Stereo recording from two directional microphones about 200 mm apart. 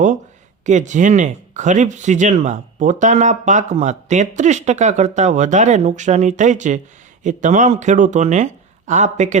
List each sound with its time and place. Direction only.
0.6 s speech: 35° right (ahead or behind)